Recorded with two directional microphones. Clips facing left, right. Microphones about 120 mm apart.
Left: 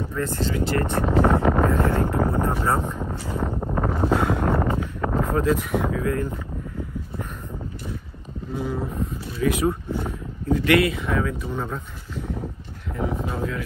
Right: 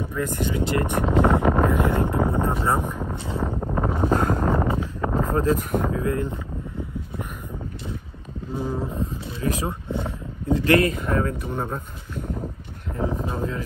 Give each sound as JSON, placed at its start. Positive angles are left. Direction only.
{"t": 0.0, "sound": "speech", "side_deg": -15}
{"t": 1.1, "sound": "wind noise", "side_deg": -20}
{"t": 3.4, "sound": "wind noise", "side_deg": 0}
{"t": 4.1, "sound": "speech", "side_deg": -45}
{"t": 4.5, "sound": "a sound", "side_deg": 0}
{"t": 5.2, "sound": "speech", "side_deg": -40}
{"t": 5.9, "sound": "speech", "side_deg": -25}
{"t": 9.0, "sound": "speech", "side_deg": -35}
{"t": 13.2, "sound": "a sound", "side_deg": -35}